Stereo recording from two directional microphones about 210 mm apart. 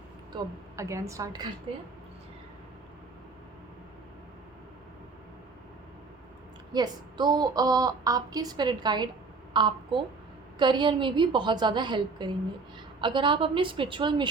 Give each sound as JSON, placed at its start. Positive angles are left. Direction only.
{"t": 0.3, "sound": "a woman's voice", "side_deg": -15}
{"t": 6.7, "sound": "a woman's voice", "side_deg": -20}